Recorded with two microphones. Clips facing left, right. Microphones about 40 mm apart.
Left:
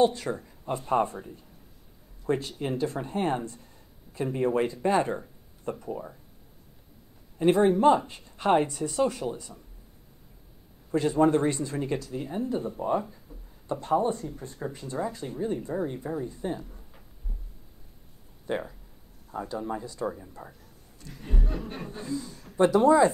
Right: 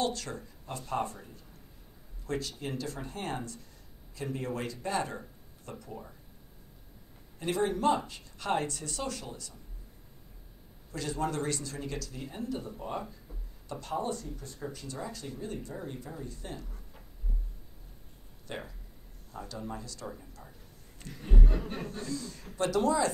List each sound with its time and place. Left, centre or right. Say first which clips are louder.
0.0 s speech: left 9 dB; left
2.2 s speech: left 7 dB; left
7.3 s speech: left 9 dB; left
10.9 s speech: left 11 dB; left
18.5 s speech: left 10 dB; centre
21.1 s a sound: even; centre
21.8 s speech: left 3 dB; centre